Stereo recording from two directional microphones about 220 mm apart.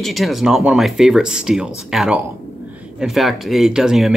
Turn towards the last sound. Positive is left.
turn(degrees=0)  # may be behind; listen again after turning